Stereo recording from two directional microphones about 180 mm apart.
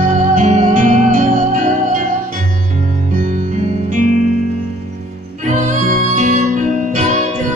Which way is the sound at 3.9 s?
45° right (ahead or behind).